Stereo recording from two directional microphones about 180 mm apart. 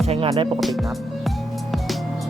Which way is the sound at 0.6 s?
Centre (ahead or behind).